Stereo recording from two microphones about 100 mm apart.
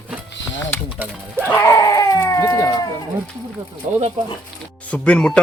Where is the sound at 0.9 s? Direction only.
20° right (ahead or behind).